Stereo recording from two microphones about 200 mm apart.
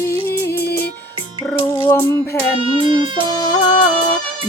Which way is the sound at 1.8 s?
15° left (ahead or behind).